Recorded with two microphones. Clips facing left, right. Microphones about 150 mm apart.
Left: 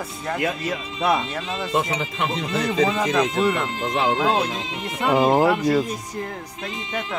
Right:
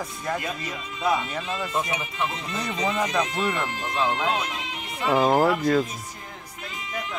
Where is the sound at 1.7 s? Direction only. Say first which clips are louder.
Left 5 dB; 90° left.